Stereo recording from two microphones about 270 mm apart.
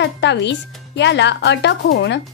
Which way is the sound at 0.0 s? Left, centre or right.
Left.